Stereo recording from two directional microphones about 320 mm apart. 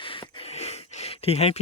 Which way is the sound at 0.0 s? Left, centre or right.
Centre.